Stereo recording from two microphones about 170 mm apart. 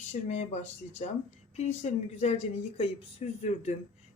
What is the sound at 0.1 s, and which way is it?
Speech, 40° left (ahead or behind).